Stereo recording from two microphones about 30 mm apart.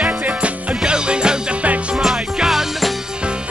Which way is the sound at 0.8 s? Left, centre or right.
Right.